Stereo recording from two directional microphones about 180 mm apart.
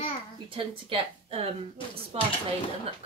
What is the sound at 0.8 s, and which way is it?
A woman's voice, 30° right (ahead or behind).